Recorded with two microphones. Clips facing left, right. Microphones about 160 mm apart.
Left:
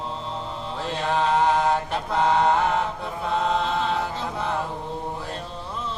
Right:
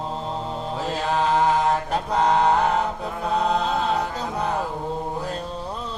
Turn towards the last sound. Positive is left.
turn(degrees=0)  # may be behind; listen again after turning